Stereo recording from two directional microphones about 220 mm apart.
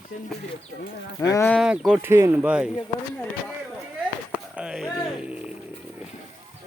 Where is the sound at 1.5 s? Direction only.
5° right (ahead or behind).